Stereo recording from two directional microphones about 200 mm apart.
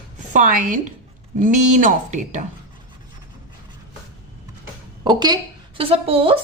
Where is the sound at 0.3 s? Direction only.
40° right (ahead or behind).